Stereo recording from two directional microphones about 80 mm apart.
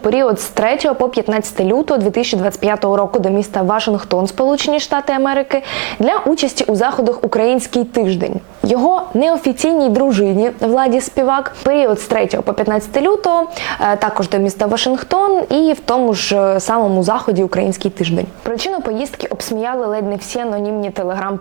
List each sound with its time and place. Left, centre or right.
0.0 s a woman's voice: right